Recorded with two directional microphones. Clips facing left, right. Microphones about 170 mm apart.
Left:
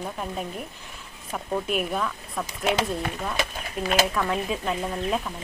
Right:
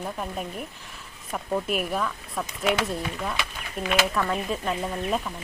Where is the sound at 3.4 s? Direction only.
40° left (ahead or behind).